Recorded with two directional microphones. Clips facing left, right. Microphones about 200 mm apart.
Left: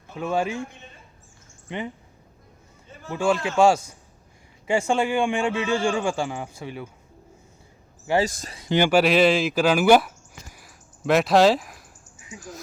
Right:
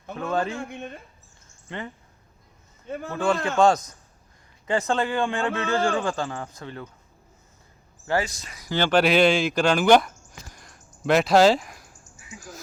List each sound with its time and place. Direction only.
0.2 s a man's voice: 10° left (ahead or behind)
0.7 s speech: 65° right (ahead or behind)
1.6 s speech: 15° left (ahead or behind)
3.1 s a man's voice: 10° left (ahead or behind)
8.2 s speech: 45° left (ahead or behind)
8.4 s speech: 25° left (ahead or behind)
8.8 s speech: 5° left (ahead or behind)